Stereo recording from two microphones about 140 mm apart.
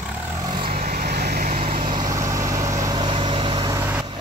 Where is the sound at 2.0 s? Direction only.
30° right (ahead or behind).